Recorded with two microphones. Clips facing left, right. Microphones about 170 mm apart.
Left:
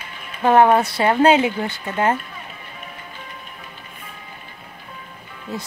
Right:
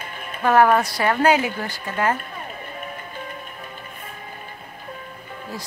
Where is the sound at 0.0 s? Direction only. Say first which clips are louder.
Right 3 dB; 50° right (ahead or behind).